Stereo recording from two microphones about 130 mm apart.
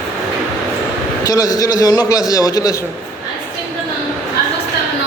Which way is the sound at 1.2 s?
30° left (ahead or behind).